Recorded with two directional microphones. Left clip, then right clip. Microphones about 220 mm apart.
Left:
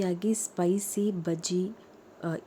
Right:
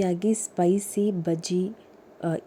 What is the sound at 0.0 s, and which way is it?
A woman's voice, 10° right (ahead or behind).